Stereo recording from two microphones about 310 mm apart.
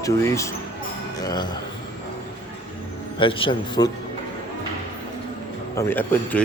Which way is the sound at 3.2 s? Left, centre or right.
Centre.